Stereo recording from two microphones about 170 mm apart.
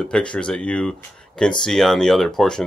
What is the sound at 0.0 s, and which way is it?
Speech, 5° left (ahead or behind).